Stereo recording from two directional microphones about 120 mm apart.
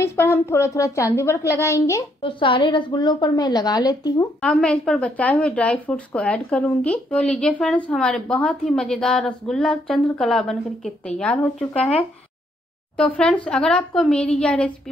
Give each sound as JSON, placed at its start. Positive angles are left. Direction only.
{"t": 0.0, "sound": "a woman's voice", "side_deg": 20}
{"t": 2.2, "sound": "a woman's voice", "side_deg": 45}
{"t": 4.4, "sound": "a woman's voice", "side_deg": 5}